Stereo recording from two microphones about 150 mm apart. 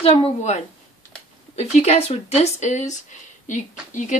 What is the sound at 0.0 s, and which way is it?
Speech, 40° left (ahead or behind).